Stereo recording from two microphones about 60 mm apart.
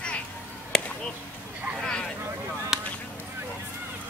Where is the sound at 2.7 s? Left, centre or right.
Centre.